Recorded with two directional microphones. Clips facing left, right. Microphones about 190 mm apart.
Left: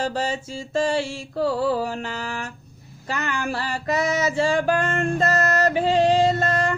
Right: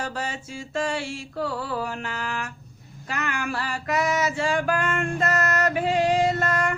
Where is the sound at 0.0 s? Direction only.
30° left (ahead or behind).